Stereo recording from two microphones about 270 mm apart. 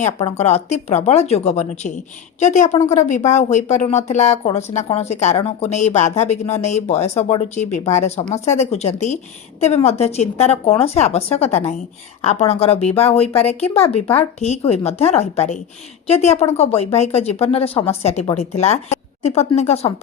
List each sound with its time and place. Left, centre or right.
0.0 s speech: left